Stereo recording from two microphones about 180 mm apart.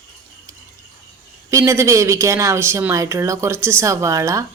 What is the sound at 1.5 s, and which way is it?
A woman's voice, 15° right (ahead or behind).